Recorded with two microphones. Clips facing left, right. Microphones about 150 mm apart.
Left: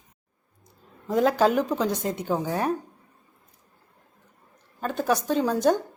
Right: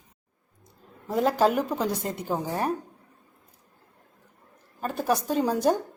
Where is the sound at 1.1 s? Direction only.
Centre (ahead or behind).